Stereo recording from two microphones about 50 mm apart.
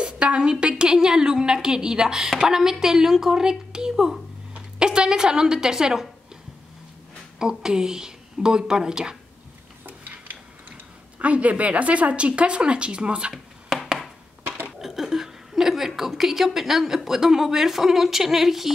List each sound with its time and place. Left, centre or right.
0.0 s a woman's voice: centre
7.3 s a woman's voice: centre
9.8 s stir: right
11.1 s a woman's voice: right
13.3 s a sound: centre
14.8 s a woman's voice: centre